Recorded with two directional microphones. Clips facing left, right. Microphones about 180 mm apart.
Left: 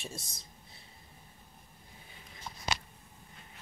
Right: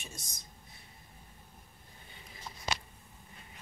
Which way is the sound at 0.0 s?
30° left (ahead or behind).